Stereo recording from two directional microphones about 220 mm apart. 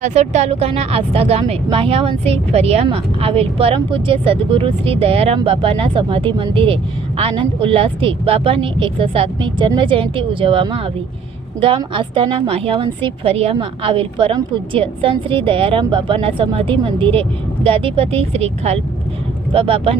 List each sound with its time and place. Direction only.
0.0 s a woman's voice: 30° right (ahead or behind)